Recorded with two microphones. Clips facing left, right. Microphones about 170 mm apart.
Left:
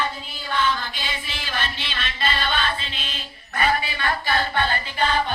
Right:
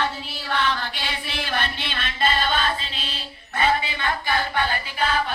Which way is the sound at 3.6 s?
20° right (ahead or behind).